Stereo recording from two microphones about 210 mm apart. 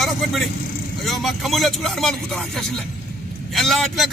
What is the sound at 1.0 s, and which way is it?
A man's voice, centre (ahead or behind).